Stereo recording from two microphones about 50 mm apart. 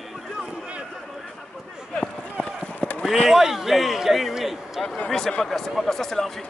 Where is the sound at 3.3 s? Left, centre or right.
Centre.